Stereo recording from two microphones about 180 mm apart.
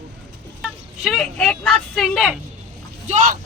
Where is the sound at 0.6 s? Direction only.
Centre (ahead or behind).